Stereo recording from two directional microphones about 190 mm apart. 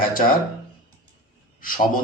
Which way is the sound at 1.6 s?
45° left (ahead or behind).